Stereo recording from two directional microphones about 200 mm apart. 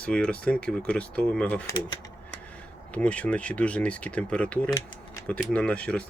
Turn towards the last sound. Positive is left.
turn(degrees=5)  # may be behind; listen again after turning